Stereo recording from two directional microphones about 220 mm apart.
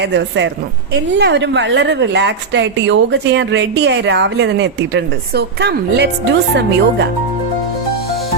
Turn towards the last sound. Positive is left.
turn(degrees=-50)  # may be behind; listen again after turning